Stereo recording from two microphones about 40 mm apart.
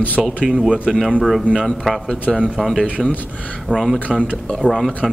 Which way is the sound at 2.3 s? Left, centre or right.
Centre.